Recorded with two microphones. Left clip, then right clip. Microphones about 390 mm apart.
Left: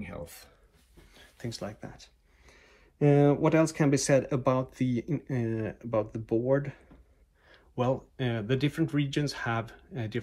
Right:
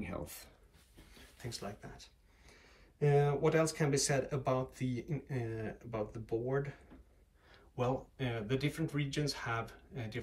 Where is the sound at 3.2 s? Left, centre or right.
Centre.